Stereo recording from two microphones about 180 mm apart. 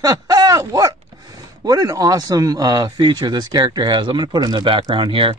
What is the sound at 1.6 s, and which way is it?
Speech, 20° right (ahead or behind).